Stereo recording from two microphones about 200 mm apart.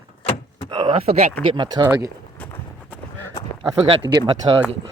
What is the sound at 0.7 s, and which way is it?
Speech, 25° right (ahead or behind).